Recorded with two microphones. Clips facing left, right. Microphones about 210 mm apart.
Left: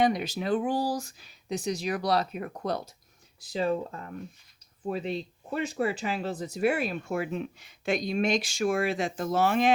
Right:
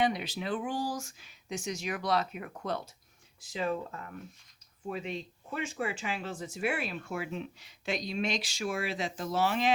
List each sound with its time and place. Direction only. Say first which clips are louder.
0.0 s speech: left 5 dB; 45° left (ahead or behind)